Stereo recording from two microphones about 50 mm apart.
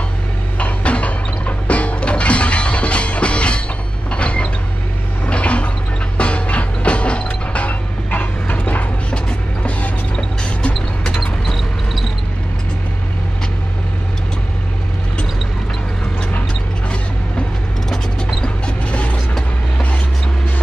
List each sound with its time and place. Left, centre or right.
0.6 s music: left
4.1 s mechanisms: left
5.2 s toilet flush: left
6.1 s mechanisms: left
9.1 s music: left
11.1 s a sound: centre
18.4 s a sound: left